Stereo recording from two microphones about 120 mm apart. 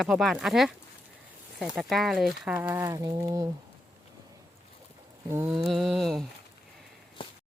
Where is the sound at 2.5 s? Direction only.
20° right (ahead or behind).